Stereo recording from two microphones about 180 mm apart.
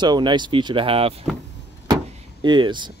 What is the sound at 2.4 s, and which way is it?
Speech, 25° right (ahead or behind).